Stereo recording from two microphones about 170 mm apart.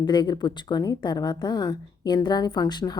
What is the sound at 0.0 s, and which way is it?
A woman's voice, 25° left (ahead or behind).